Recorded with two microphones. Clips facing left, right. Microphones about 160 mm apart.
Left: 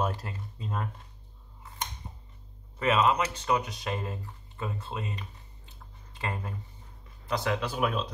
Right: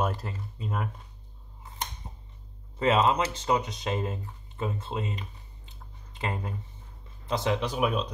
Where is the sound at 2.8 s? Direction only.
30° right (ahead or behind).